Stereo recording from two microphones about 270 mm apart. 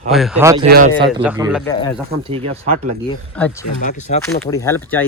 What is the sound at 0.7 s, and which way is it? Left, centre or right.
Speech, right.